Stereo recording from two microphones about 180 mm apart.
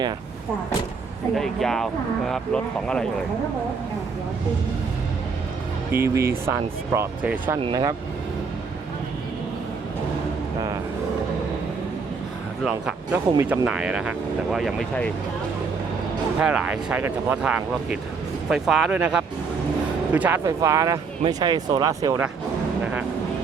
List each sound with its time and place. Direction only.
1.4 s speech: centre (ahead or behind)
5.9 s speech: 15° right (ahead or behind)
7.6 s speech: 25° right (ahead or behind)
12.6 s speech: 5° right (ahead or behind)
13.3 s speech: 15° right (ahead or behind); by 15.1 s 5° left (ahead or behind)
16.4 s speech: 5° right (ahead or behind)